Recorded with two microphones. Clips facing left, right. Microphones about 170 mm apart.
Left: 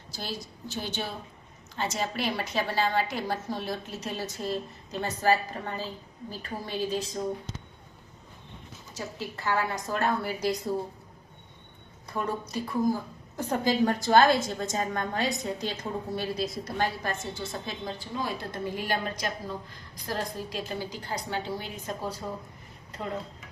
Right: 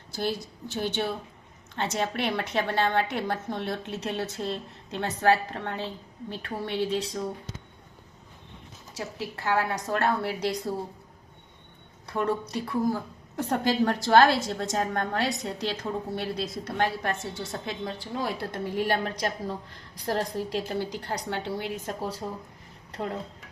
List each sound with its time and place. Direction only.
0.1 s a woman's voice: 60° right (ahead or behind)
9.0 s a woman's voice: 70° right (ahead or behind)
12.0 s a woman's voice: 70° right (ahead or behind)